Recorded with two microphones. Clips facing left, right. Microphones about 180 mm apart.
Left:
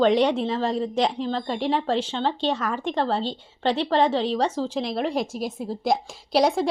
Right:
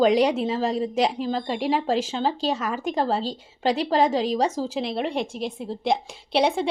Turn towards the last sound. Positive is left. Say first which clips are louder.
# left 1 dB
turn(degrees=0)  # may be behind; listen again after turning